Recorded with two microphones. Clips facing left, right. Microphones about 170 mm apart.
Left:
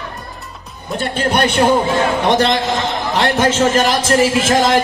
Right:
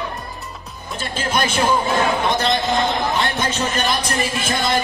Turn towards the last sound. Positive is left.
turn(degrees=90)